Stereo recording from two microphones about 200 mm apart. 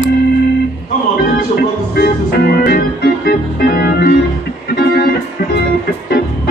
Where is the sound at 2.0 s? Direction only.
50° left (ahead or behind).